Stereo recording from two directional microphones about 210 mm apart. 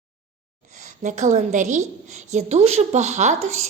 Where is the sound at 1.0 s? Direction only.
35° right (ahead or behind).